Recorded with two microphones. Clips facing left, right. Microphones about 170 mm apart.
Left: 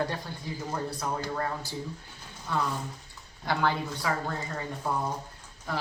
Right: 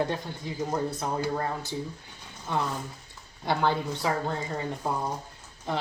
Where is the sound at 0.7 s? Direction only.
25° right (ahead or behind).